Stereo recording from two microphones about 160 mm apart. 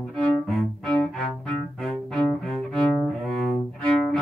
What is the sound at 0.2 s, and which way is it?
Cello, 5° left (ahead or behind).